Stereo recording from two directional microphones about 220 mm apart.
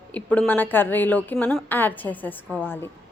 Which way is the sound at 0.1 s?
5° left (ahead or behind).